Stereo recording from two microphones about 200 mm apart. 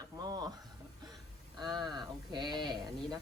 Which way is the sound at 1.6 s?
20° right (ahead or behind).